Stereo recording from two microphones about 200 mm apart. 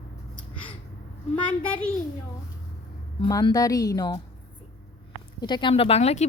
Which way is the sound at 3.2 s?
20° left (ahead or behind).